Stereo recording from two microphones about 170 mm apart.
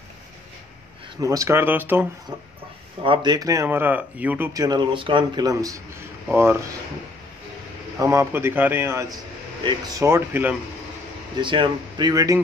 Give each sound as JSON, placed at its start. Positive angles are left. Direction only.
{"t": 1.2, "sound": "speech", "side_deg": -20}
{"t": 3.0, "sound": "speech", "side_deg": -30}
{"t": 4.6, "sound": "speech", "side_deg": -25}
{"t": 8.0, "sound": "speech", "side_deg": -15}
{"t": 11.3, "sound": "speech", "side_deg": -25}